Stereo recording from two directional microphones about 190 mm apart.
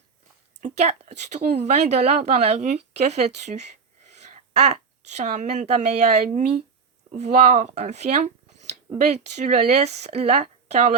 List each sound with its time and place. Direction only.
0.6 s speech: 35° right (ahead or behind)